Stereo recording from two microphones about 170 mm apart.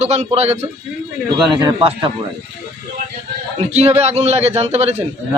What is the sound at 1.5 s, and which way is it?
Speech, 25° right (ahead or behind).